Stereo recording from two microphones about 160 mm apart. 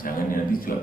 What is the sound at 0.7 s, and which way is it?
Speech, 65° left (ahead or behind).